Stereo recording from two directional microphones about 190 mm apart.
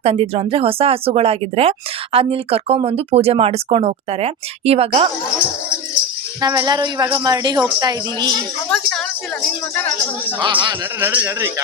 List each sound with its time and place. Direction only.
0.0 s speech: 30° right (ahead or behind)
6.4 s a woman's voice: 20° right (ahead or behind)
8.7 s speech: 5° left (ahead or behind)
10.4 s a woman's voice: 25° right (ahead or behind)
11.0 s a man's voice: 10° right (ahead or behind)